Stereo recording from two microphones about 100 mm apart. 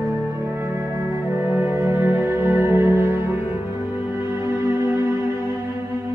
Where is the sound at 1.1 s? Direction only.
20° right (ahead or behind).